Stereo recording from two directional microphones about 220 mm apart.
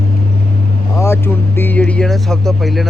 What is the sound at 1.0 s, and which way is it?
Speech, 10° left (ahead or behind).